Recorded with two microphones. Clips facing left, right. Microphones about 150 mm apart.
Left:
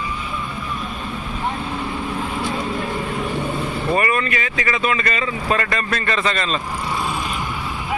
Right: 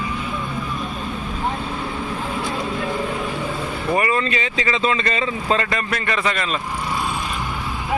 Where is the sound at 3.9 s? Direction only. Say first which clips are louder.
Right 1 dB; 20° right (ahead or behind).